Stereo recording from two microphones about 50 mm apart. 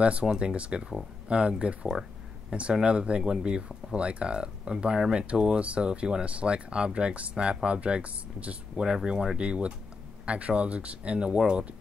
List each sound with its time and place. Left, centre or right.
0.0 s speech: right
8.8 s speech: centre